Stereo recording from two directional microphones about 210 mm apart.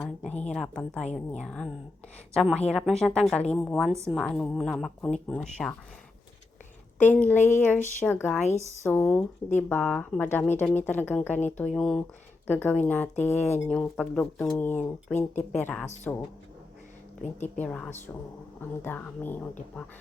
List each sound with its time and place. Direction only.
0.3 s a sound: 30° left (ahead or behind)
0.5 s a woman's voice: 5° left (ahead or behind)
7.0 s a woman's voice: 10° left (ahead or behind)
17.6 s speech: 5° left (ahead or behind)